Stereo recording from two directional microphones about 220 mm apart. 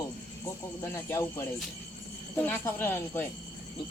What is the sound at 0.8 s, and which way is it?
Speech, 10° left (ahead or behind).